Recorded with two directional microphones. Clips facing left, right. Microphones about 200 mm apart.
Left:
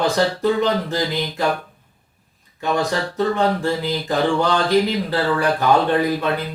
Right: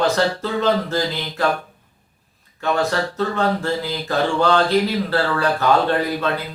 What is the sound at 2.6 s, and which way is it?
Speech, 15° left (ahead or behind).